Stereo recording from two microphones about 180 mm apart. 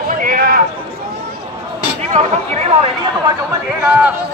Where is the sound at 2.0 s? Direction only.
40° right (ahead or behind).